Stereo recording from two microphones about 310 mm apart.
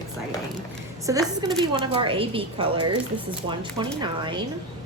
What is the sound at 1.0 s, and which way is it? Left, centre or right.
Speech, centre.